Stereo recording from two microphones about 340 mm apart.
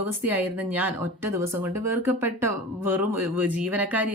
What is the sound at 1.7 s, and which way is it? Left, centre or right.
A woman's voice, right.